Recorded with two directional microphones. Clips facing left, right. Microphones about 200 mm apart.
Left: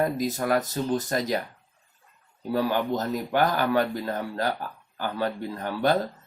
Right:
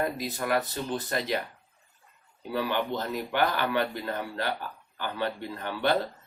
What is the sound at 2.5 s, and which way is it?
Speech, 40° left (ahead or behind).